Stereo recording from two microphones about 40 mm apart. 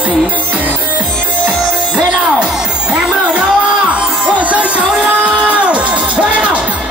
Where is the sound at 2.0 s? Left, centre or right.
Right.